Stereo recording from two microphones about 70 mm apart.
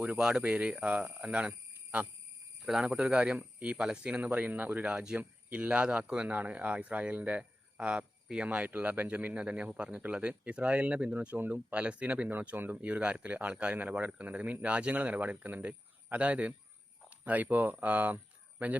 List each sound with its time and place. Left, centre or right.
0.2 s speech: centre